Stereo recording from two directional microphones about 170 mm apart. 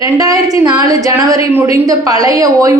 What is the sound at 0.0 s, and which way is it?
A woman's voice, 20° right (ahead or behind).